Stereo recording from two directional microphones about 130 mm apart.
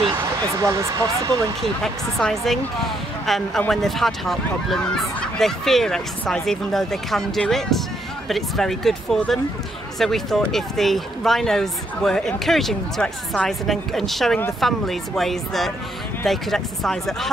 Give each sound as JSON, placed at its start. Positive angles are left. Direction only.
{"t": 0.1, "sound": "speech", "side_deg": -20}
{"t": 2.1, "sound": "speech", "side_deg": 0}